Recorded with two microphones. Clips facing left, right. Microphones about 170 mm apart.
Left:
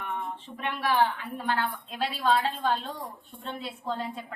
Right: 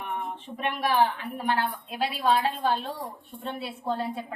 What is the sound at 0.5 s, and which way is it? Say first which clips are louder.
A woman's voice: right 2 dB; 15° right (ahead or behind).